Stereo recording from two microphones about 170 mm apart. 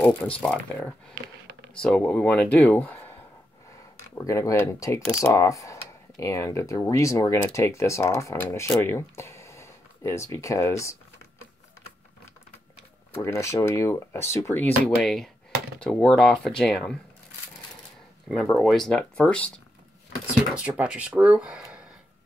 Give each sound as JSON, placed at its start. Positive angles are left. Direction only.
{"t": 0.0, "sound": "speech", "side_deg": 10}
{"t": 4.1, "sound": "speech", "side_deg": 20}
{"t": 13.2, "sound": "speech", "side_deg": 15}
{"t": 18.3, "sound": "speech", "side_deg": 0}
{"t": 20.5, "sound": "speech", "side_deg": -5}